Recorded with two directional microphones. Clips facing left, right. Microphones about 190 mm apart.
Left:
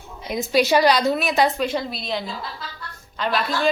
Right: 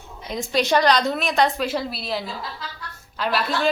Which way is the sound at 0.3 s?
5° left (ahead or behind).